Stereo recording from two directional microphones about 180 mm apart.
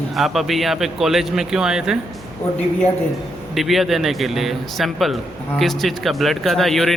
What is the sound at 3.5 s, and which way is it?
A man's voice, centre (ahead or behind).